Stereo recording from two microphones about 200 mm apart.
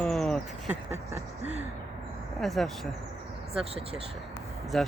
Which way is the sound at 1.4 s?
35° right (ahead or behind).